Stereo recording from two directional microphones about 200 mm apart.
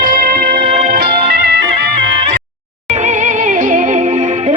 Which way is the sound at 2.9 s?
35° right (ahead or behind).